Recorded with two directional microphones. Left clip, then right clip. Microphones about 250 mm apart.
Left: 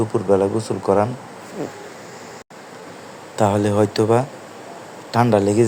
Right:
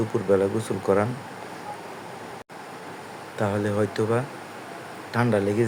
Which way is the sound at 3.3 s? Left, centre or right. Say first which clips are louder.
Left 8 dB; centre.